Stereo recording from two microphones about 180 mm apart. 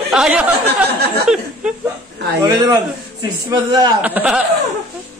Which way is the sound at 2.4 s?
20° right (ahead or behind).